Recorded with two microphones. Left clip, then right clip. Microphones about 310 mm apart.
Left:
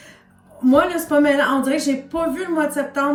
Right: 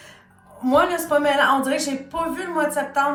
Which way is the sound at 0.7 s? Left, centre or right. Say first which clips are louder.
Left 1 dB; centre.